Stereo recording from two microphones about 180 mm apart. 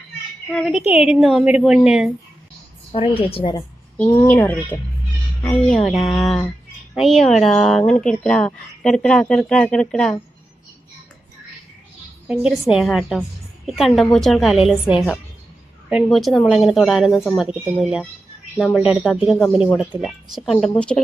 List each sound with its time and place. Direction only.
0.5 s speech: centre (ahead or behind)
2.9 s a woman's voice: 30° left (ahead or behind)
3.9 s speech: 10° left (ahead or behind)
12.3 s speech: 5° right (ahead or behind)